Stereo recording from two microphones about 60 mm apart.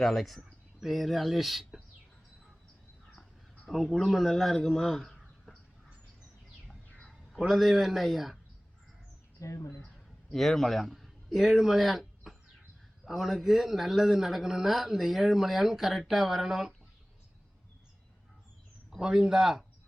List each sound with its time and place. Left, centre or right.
0.0 s speech: centre
3.7 s a man's voice: centre
4.6 s a sound: centre
7.1 s a man's voice: centre
9.4 s speech: left
10.2 s a man's voice: centre
18.9 s speech: centre